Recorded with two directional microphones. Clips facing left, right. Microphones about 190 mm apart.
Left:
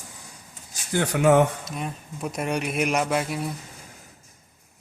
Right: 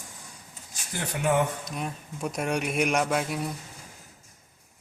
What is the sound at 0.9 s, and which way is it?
Speech, 85° left.